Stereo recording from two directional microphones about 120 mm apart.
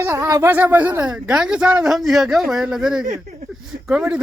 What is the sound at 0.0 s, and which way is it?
Speech, 25° right (ahead or behind).